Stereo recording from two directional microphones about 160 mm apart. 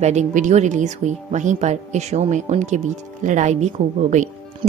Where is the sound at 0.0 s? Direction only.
45° right (ahead or behind).